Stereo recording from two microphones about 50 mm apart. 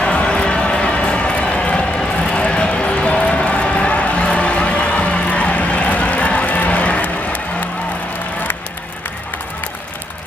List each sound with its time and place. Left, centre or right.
0.0 s run: left